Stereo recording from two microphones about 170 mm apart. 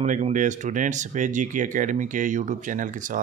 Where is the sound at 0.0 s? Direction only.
45° right (ahead or behind).